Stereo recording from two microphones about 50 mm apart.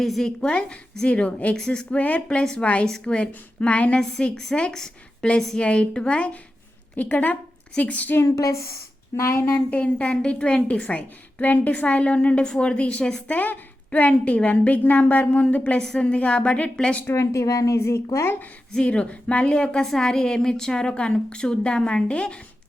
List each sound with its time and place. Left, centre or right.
0.0 s a woman's voice: centre
1.0 s a woman's voice: left
2.4 s a woman's voice: centre
3.9 s a woman's voice: centre
8.2 s speech: left
9.6 s a woman's voice: left
13.0 s a woman's voice: centre
13.2 s a woman's voice: left
17.2 s a woman's voice: left
18.8 s a woman's voice: left